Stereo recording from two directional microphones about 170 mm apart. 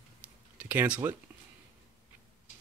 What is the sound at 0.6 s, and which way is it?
Speech, 10° right (ahead or behind).